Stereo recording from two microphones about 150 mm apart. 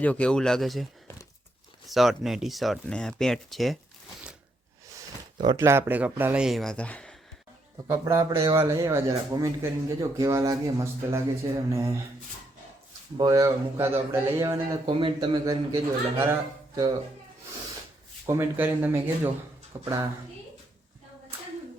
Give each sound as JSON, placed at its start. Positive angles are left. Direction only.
{"t": 0.0, "sound": "speech", "side_deg": 10}
{"t": 1.9, "sound": "speech", "side_deg": 0}
{"t": 4.9, "sound": "a sound", "side_deg": -25}
{"t": 5.6, "sound": "speech", "side_deg": -15}
{"t": 7.9, "sound": "speech", "side_deg": -20}
{"t": 13.1, "sound": "speech", "side_deg": -25}
{"t": 14.8, "sound": "a man's voice", "side_deg": -35}
{"t": 18.3, "sound": "speech", "side_deg": -15}